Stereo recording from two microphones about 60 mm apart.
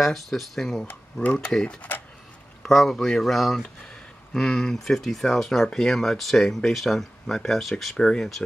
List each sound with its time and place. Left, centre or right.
0.0 s speech: centre
1.2 s speech: left
2.6 s speech: centre